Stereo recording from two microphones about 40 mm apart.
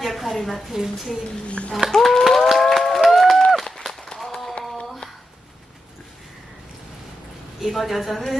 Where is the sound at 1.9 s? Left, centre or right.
Centre.